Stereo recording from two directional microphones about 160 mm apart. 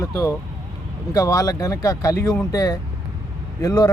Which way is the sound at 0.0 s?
20° left (ahead or behind).